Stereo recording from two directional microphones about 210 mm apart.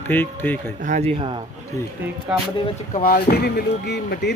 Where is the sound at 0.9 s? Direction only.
30° right (ahead or behind).